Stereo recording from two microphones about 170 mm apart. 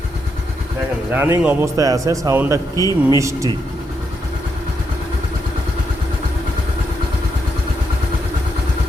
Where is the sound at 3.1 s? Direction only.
20° right (ahead or behind).